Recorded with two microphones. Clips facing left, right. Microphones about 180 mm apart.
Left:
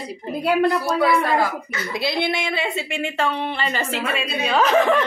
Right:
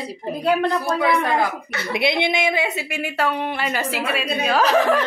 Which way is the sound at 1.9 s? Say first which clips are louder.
Right 2 dB; 20° right (ahead or behind).